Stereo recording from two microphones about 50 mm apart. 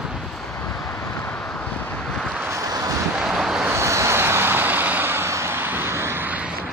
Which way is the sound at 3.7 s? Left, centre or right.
Right.